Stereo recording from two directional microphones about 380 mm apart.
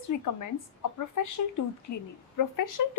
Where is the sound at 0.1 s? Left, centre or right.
Left.